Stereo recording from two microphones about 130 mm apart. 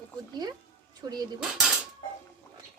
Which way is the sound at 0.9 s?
30° right (ahead or behind).